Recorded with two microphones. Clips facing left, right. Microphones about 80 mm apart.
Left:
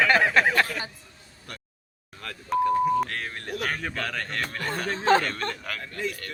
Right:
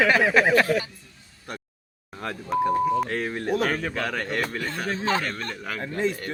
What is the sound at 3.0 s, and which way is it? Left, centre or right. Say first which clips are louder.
A man's voice: right 7 dB; centre.